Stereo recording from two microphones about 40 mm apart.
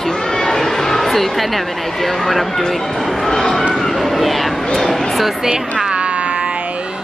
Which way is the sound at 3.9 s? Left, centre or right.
Centre.